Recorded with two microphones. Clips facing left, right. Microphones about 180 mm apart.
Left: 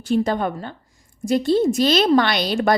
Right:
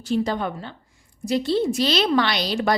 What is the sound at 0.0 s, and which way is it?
A woman's voice, 50° left (ahead or behind).